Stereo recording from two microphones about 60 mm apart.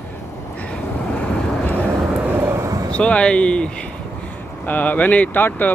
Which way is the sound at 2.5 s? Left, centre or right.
Right.